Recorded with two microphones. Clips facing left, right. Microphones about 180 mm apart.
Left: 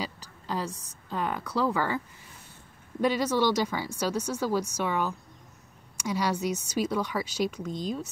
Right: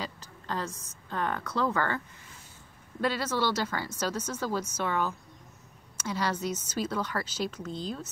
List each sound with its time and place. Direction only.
0.0 s speech: 10° left (ahead or behind)
3.0 s speech: 15° left (ahead or behind)